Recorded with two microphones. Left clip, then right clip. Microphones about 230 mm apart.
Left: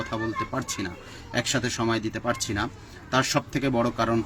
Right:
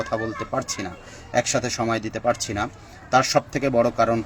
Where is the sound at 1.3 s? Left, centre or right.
Centre.